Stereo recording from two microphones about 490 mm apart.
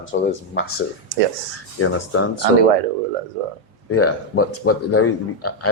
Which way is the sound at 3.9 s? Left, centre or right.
Left.